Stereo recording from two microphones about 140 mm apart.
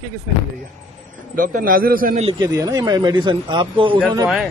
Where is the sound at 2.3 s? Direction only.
25° right (ahead or behind).